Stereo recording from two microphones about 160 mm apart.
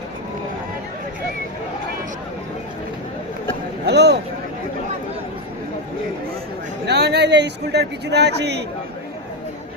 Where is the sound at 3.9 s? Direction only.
90° right.